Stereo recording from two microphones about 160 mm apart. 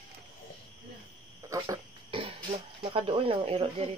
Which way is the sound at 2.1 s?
35° right (ahead or behind).